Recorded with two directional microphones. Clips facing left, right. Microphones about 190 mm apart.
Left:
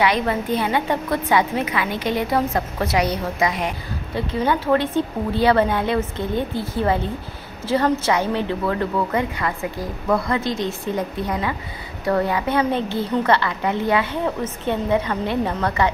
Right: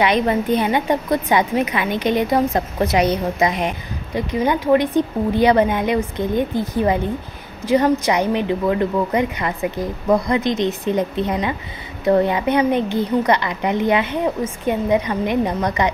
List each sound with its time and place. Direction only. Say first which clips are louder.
0.0 s a woman's voice: right 3 dB; 20° right (ahead or behind)